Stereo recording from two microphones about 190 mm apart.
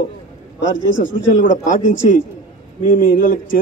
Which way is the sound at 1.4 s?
45° left (ahead or behind).